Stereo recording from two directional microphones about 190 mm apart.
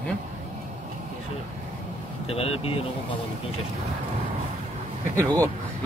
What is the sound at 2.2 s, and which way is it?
Speech, 30° left (ahead or behind).